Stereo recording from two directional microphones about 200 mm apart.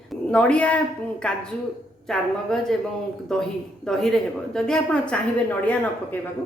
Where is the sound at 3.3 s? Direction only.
Centre (ahead or behind).